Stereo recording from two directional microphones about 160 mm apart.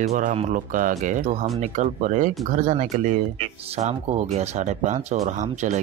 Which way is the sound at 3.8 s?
45° right (ahead or behind).